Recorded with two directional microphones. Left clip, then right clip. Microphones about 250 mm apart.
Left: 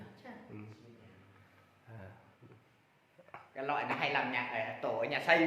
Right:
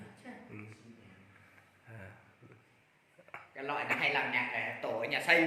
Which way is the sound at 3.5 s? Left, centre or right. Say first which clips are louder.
Even; left.